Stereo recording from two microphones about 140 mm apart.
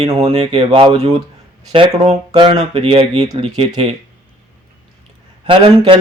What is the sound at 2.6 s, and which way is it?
Speech, 45° right (ahead or behind).